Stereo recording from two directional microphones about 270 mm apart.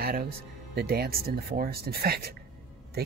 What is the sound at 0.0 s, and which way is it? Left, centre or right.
Speech, right.